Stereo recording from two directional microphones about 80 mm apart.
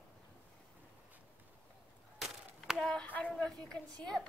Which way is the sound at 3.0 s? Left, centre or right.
Centre.